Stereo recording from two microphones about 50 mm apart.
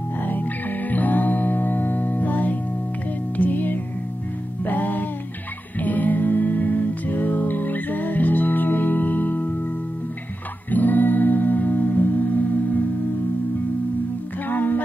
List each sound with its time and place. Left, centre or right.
0.2 s music: left
10.7 s music: left
14.5 s music: left